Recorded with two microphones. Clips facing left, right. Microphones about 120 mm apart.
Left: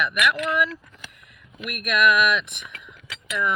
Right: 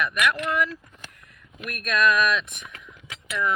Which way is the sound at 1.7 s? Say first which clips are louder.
Left 2 dB; 15° left (ahead or behind).